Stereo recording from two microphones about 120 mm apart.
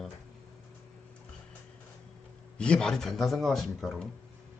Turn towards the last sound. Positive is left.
turn(degrees=0)  # may be behind; listen again after turning